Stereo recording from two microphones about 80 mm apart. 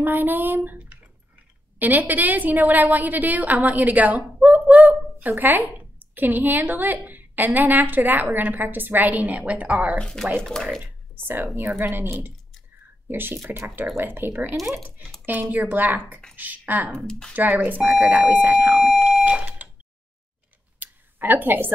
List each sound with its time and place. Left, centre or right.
0.0 s a woman's voice: right
0.7 s a sound: right
1.8 s a woman's voice: right
9.9 s speech: centre
10.8 s a sound: right
11.4 s a woman's voice: right
16.9 s speech: centre
17.4 s a woman's voice: right
18.8 s fire alarm: centre
20.8 s a sound: right